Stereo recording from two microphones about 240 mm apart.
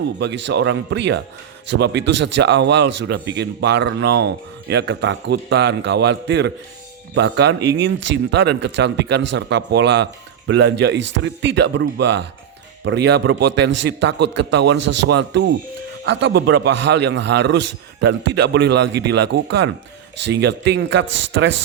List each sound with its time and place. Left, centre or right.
0.2 s a man's voice: right